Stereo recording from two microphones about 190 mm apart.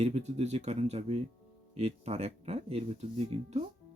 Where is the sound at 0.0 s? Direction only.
35° right (ahead or behind).